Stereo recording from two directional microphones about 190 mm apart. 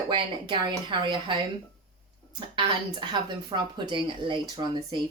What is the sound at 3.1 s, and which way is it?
Speech, 25° right (ahead or behind).